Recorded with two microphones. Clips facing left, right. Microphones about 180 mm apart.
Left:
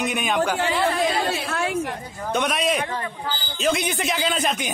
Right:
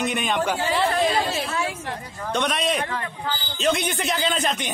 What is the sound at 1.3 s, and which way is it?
Speech, 65° left (ahead or behind).